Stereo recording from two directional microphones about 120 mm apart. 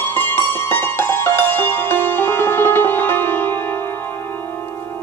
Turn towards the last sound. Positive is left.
turn(degrees=15)  # may be behind; listen again after turning